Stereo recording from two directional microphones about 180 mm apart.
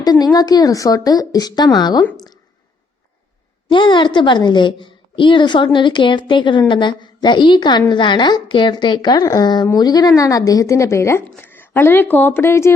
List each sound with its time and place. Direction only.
0.0 s a woman's voice: 20° left (ahead or behind)
3.7 s a woman's voice: 25° left (ahead or behind)